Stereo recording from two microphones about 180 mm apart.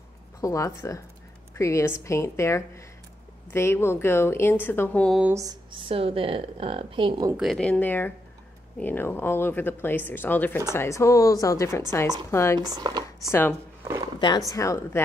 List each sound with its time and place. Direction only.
0.4 s speech: 15° left (ahead or behind)
5.2 s speech: 15° right (ahead or behind)
7.3 s speech: centre (ahead or behind)
12.5 s speech: 20° right (ahead or behind)
13.3 s speech: 10° left (ahead or behind)